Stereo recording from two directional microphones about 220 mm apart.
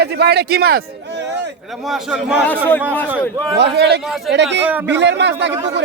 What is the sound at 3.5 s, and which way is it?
Speech, 50° right (ahead or behind).